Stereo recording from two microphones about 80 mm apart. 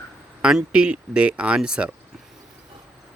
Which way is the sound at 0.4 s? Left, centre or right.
Centre.